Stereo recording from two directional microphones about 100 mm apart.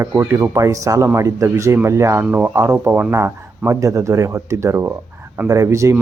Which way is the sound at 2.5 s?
25° right (ahead or behind).